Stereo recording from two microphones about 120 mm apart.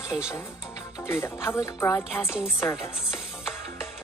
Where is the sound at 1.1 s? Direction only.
20° left (ahead or behind).